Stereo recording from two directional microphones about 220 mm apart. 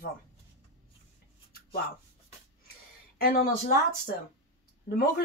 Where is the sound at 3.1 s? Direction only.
40° left (ahead or behind).